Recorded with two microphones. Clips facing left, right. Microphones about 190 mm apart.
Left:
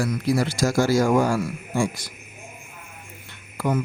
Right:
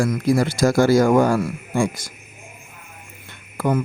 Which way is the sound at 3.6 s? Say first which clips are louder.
Right 3 dB; 55° right (ahead or behind).